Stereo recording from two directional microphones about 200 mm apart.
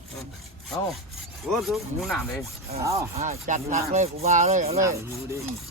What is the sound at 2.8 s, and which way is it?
Rub, 15° right (ahead or behind).